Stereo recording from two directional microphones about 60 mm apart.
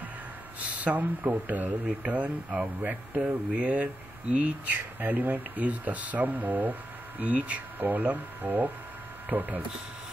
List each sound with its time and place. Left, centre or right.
0.6 s speech: right